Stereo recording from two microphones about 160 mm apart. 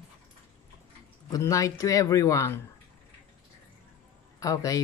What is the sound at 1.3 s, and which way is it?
Speech, 20° left (ahead or behind).